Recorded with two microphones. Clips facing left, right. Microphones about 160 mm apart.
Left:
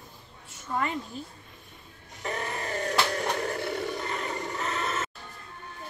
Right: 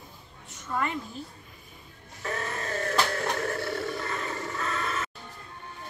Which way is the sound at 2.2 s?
15° left (ahead or behind).